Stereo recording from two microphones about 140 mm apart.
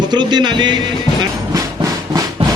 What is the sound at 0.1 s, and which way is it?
Speech, 30° right (ahead or behind).